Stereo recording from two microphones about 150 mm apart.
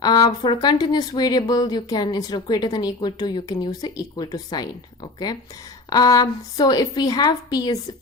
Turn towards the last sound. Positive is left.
turn(degrees=25)  # may be behind; listen again after turning